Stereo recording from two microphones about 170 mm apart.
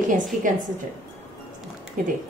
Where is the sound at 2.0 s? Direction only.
55° right (ahead or behind).